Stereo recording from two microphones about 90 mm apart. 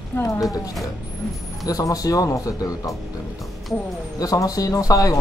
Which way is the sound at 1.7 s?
40° left (ahead or behind).